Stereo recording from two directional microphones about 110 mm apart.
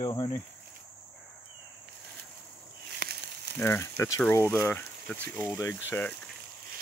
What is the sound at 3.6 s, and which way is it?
Speech, 25° left (ahead or behind).